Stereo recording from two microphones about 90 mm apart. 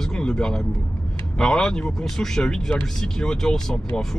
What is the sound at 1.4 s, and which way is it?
Speech, 10° left (ahead or behind).